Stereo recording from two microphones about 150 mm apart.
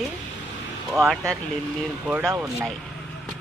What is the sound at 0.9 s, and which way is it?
Speech, centre (ahead or behind).